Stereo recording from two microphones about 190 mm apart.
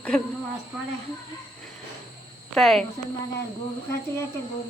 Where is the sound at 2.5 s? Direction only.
Centre (ahead or behind).